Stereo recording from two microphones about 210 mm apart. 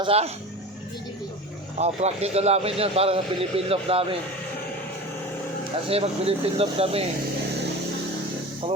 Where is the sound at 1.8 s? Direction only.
30° right (ahead or behind).